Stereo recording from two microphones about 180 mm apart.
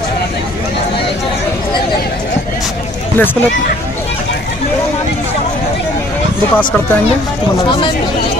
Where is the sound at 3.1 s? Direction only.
10° left (ahead or behind).